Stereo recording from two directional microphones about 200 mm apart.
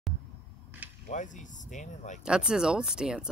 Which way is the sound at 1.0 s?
40° left (ahead or behind).